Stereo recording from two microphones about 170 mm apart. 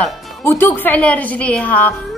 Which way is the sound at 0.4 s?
15° left (ahead or behind).